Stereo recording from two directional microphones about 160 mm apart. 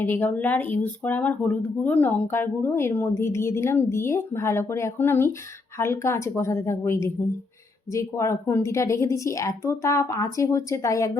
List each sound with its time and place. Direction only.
0.0 s a woman's voice: 10° left (ahead or behind)